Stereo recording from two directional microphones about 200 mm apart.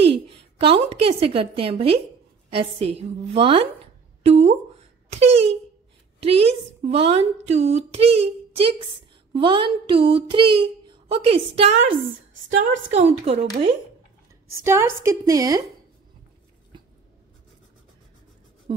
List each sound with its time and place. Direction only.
0.1 s a woman's voice: 25° right (ahead or behind)
12.9 s speech: 35° right (ahead or behind)
14.6 s a woman's voice: 15° right (ahead or behind)